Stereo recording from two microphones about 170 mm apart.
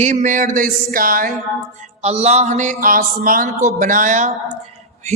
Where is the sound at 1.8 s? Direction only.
40° right (ahead or behind).